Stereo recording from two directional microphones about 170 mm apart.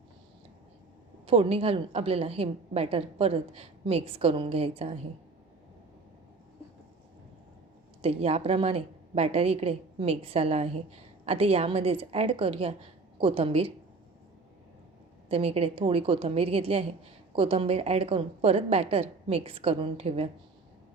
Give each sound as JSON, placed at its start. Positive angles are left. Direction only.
{"t": 1.3, "sound": "a woman's voice", "side_deg": -35}
{"t": 8.0, "sound": "a woman's voice", "side_deg": -35}
{"t": 15.3, "sound": "a woman's voice", "side_deg": -35}